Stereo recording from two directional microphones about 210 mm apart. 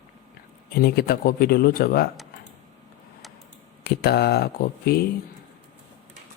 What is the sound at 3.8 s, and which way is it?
Speech, 50° left (ahead or behind).